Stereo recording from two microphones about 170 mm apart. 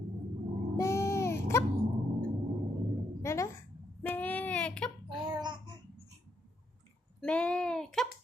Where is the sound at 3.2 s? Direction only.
15° left (ahead or behind).